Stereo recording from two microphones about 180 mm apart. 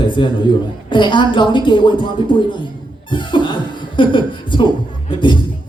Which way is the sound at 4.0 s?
25° left (ahead or behind).